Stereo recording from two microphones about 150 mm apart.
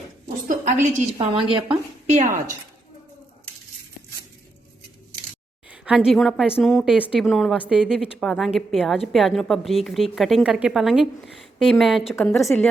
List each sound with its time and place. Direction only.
0.4 s a woman's voice: 55° right (ahead or behind)
1.2 s a woman's voice: 35° right (ahead or behind)
1.7 s a sound: 50° right (ahead or behind)
5.6 s a woman's voice: 5° right (ahead or behind)